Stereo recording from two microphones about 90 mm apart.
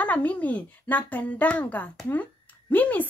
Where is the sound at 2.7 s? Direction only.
20° left (ahead or behind).